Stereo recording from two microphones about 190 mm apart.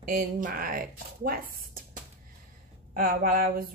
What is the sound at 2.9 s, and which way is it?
Speech, 50° right (ahead or behind).